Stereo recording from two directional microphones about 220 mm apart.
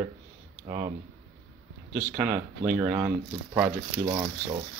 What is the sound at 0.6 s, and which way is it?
Speech, 25° right (ahead or behind).